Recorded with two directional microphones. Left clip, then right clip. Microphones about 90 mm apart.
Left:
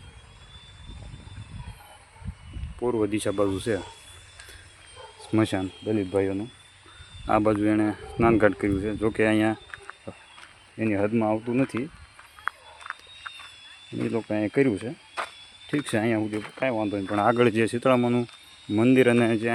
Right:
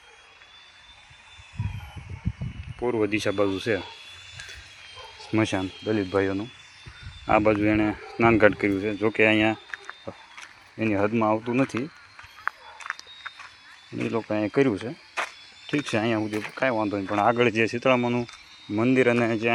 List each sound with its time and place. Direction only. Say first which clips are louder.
2.7 s speech: right 1 dB; 15° left (ahead or behind)
4.9 s a sound: even; 5° left (ahead or behind)
5.3 s speech: even; 40° left (ahead or behind)
5.5 s speech: right 1 dB; centre (ahead or behind)
7.3 s speech: right 2 dB; 20° left (ahead or behind)
8.5 s speech: right 2 dB; 5° left (ahead or behind)
9.0 s speech: right 3 dB; 25° left (ahead or behind)
10.8 s speech: right 1 dB; 15° left (ahead or behind)
13.9 s speech: right 1 dB; 35° left (ahead or behind)
16.2 s speech: right 2 dB; 10° left (ahead or behind)
17.3 s speech: even; 85° left